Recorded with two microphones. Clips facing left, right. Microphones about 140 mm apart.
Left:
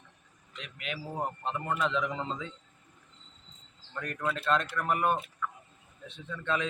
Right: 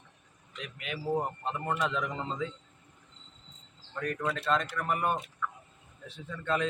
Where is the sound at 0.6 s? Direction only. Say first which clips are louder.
Right 3 dB; centre (ahead or behind).